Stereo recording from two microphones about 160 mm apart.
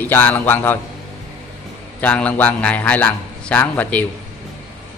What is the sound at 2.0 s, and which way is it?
A man's voice, 10° left (ahead or behind).